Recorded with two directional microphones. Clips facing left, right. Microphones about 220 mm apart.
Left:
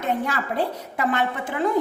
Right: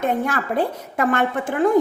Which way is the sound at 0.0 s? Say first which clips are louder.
Right 3 dB; 50° right (ahead or behind).